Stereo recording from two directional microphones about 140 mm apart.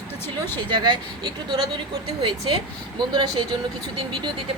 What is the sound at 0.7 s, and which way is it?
A woman's voice, 30° right (ahead or behind).